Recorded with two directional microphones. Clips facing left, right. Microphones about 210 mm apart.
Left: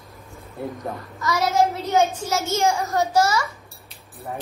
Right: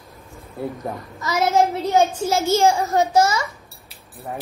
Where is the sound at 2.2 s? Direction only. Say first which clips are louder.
Right 5 dB; 30° right (ahead or behind).